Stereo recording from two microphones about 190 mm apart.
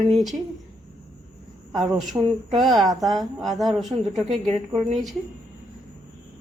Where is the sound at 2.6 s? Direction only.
Centre (ahead or behind).